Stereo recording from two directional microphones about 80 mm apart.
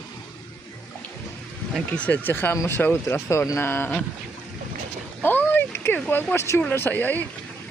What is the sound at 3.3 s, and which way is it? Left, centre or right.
Speech, left.